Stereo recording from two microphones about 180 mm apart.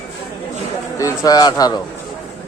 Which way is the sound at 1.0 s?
20° left (ahead or behind).